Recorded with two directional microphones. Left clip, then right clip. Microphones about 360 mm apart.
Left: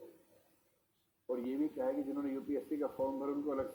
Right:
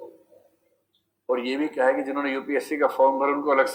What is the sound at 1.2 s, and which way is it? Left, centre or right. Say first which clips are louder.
Speech: right 12 dB; right.